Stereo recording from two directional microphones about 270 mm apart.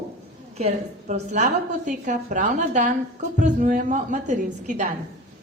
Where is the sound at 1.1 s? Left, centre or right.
Right.